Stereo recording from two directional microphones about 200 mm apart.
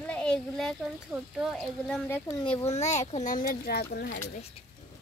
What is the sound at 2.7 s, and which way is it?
Speech, 35° left (ahead or behind).